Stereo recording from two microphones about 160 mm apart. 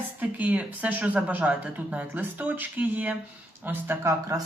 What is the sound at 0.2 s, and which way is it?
Speech, 10° right (ahead or behind).